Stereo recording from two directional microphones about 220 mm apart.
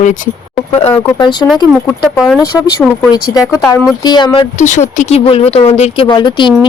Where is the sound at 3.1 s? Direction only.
15° left (ahead or behind).